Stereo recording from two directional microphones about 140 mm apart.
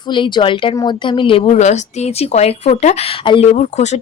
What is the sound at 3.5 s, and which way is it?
Speech, 60° left (ahead or behind).